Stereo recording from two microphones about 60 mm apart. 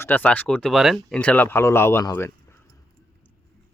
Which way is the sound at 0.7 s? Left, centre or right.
Centre.